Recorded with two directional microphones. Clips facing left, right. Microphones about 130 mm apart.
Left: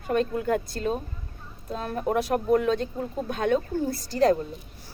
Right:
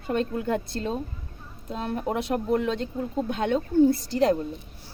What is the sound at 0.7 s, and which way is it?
A woman's voice, 25° right (ahead or behind).